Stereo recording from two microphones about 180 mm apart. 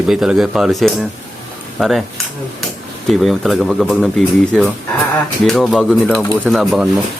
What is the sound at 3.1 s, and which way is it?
Speech, centre (ahead or behind).